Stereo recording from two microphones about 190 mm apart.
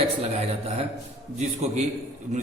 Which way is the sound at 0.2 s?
30° right (ahead or behind).